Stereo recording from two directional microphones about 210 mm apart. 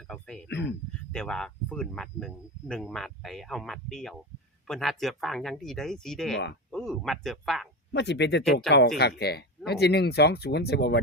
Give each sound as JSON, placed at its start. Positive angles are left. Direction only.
{"t": 0.1, "sound": "speech", "side_deg": 5}
{"t": 0.4, "sound": "speech", "side_deg": 55}
{"t": 1.1, "sound": "speech", "side_deg": 5}
{"t": 7.9, "sound": "speech", "side_deg": 55}